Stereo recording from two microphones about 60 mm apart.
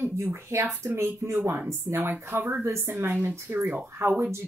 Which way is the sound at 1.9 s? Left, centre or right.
Right.